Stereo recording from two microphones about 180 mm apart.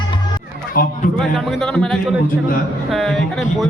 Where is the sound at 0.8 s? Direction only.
55° left (ahead or behind).